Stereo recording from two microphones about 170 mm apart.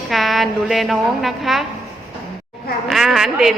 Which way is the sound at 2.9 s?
Centre (ahead or behind).